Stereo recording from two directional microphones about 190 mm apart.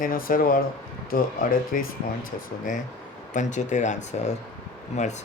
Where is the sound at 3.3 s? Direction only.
40° left (ahead or behind).